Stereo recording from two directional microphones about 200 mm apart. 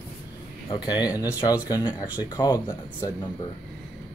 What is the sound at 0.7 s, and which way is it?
Speech, 20° left (ahead or behind).